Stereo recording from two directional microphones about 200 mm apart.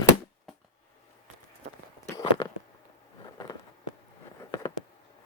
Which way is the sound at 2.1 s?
20° left (ahead or behind).